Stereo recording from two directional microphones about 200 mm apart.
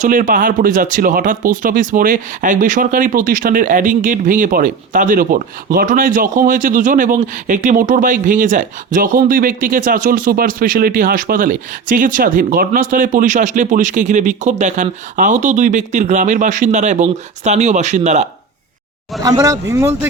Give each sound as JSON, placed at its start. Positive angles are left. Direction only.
{"t": 0.0, "sound": "speech", "side_deg": -45}
{"t": 19.2, "sound": "speech", "side_deg": -15}